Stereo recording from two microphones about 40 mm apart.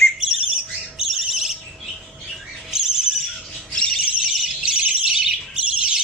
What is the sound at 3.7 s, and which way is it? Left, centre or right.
Bird, centre.